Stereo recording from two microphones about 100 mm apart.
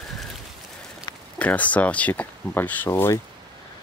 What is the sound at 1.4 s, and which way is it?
Speech, 15° left (ahead or behind).